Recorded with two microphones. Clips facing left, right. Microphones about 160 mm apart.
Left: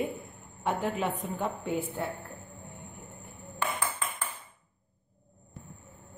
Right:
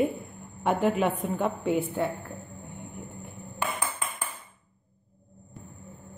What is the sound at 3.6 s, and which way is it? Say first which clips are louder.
Ping: right 1 dB; 10° right (ahead or behind).